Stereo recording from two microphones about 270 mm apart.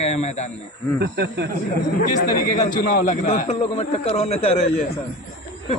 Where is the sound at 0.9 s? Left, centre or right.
Right.